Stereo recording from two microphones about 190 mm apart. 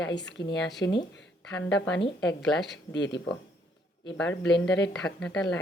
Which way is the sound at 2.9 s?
65° left (ahead or behind).